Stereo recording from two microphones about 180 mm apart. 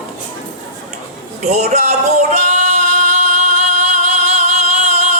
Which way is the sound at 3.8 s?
40° right (ahead or behind).